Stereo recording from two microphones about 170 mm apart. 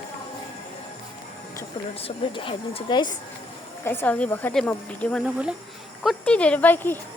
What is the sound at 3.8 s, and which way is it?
Speech, 15° left (ahead or behind).